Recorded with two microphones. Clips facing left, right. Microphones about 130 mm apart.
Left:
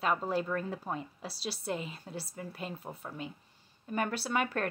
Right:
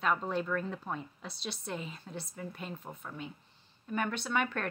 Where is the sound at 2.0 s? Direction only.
40° left (ahead or behind).